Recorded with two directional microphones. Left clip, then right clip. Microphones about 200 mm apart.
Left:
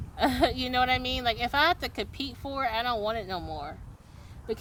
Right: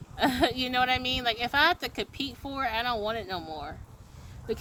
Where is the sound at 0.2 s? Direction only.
20° left (ahead or behind).